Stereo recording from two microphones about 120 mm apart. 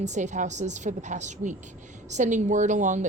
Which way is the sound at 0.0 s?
80° right.